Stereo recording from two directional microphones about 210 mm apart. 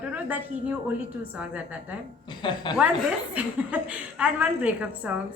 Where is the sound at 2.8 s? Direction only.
5° right (ahead or behind).